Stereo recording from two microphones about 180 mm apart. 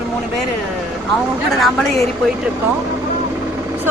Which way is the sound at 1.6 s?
5° left (ahead or behind).